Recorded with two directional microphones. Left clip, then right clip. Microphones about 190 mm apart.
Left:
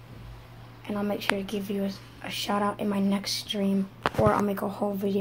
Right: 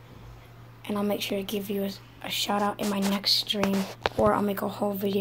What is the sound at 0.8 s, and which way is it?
A woman's voice, 15° right (ahead or behind).